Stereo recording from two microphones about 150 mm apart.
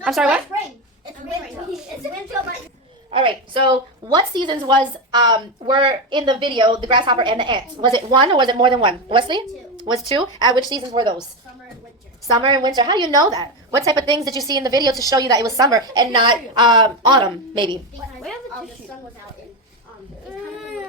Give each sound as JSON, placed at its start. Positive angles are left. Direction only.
{"t": 0.0, "sound": "a child's voice", "side_deg": -5}
{"t": 3.1, "sound": "a woman's voice", "side_deg": -35}
{"t": 12.3, "sound": "a woman's voice", "side_deg": -30}